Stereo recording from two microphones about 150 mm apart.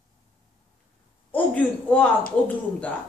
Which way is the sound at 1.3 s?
10° left (ahead or behind).